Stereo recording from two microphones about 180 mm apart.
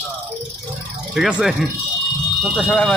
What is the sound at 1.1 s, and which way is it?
A man's voice, 5° right (ahead or behind).